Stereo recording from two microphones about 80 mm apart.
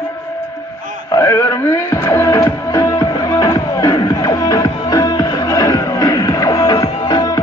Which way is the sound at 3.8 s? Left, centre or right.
Left.